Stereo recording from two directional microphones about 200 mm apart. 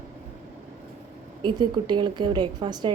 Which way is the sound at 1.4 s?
25° right (ahead or behind).